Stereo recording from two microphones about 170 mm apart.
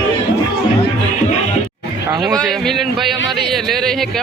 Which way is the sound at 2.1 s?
20° right (ahead or behind).